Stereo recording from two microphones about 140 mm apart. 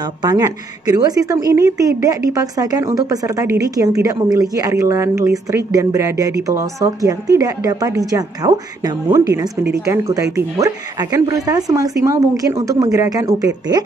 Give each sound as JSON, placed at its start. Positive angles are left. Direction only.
{"t": 0.0, "sound": "a woman's voice", "side_deg": -30}